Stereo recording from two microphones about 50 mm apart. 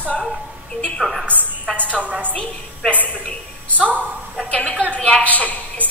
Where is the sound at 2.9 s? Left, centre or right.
Left.